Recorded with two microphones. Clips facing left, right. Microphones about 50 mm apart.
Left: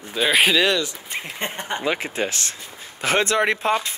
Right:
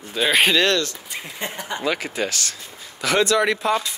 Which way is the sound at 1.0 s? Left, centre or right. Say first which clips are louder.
Left 2 dB; left.